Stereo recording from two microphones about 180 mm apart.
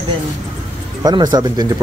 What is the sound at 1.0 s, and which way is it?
Speech, 25° right (ahead or behind).